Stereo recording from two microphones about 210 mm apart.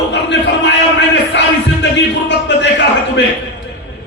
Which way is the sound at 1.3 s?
55° left (ahead or behind).